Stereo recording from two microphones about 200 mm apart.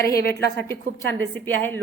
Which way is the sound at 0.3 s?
10° left (ahead or behind).